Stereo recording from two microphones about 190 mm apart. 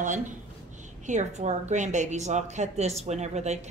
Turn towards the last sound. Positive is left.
turn(degrees=-35)  # may be behind; listen again after turning